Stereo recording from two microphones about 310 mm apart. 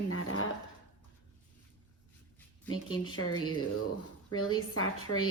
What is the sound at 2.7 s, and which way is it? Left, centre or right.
Speech, left.